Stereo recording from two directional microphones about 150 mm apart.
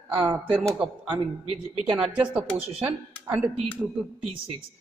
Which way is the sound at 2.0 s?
10° right (ahead or behind).